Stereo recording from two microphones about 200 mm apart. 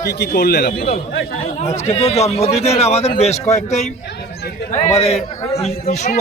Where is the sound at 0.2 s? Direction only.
50° left (ahead or behind).